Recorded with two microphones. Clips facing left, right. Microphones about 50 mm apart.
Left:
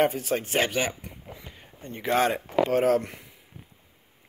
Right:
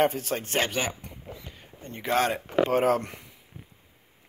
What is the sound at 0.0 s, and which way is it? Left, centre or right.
Speech, centre.